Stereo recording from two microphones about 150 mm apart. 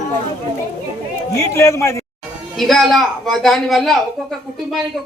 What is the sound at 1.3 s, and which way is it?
Speech, 20° left (ahead or behind).